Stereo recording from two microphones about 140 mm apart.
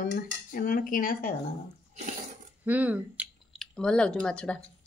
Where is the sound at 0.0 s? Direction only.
90° left.